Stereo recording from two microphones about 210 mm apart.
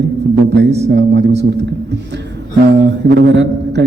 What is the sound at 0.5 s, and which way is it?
A man's voice, 55° right (ahead or behind).